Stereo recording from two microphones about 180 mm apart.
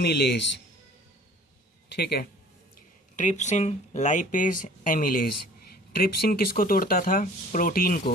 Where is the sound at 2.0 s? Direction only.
60° left (ahead or behind).